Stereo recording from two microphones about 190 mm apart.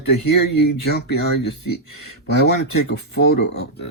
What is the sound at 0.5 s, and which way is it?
Speech, 60° left (ahead or behind).